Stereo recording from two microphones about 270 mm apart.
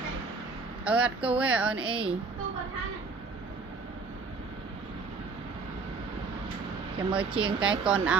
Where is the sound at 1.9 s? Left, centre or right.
Centre.